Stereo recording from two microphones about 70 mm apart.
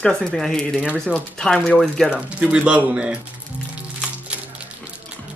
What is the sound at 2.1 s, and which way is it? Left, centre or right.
Speech, centre.